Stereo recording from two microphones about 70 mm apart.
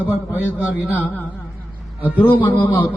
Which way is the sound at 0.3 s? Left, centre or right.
Right.